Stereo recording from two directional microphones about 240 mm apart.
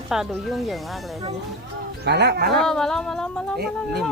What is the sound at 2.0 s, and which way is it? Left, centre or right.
Speech, right.